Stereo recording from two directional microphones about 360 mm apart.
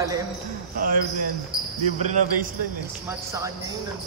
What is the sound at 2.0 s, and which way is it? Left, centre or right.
Speech, centre.